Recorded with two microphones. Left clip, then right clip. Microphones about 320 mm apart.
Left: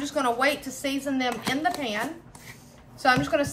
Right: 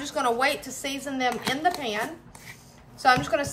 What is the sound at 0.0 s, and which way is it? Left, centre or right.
A woman's voice, centre.